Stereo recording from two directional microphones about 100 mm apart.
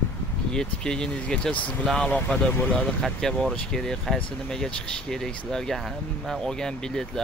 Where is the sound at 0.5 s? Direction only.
5° left (ahead or behind).